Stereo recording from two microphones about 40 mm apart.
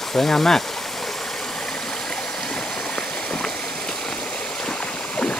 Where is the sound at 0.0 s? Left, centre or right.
Centre.